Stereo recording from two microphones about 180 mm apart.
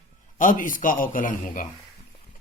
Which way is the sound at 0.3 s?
45° left (ahead or behind).